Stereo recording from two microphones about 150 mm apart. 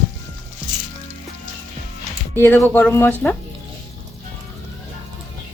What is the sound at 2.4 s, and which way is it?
Speech, 15° left (ahead or behind).